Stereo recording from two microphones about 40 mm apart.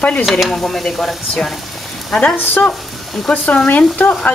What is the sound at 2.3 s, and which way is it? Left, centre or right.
Speech, left.